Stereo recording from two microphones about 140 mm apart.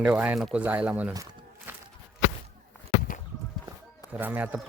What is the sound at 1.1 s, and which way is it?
Crumpling, 25° right (ahead or behind).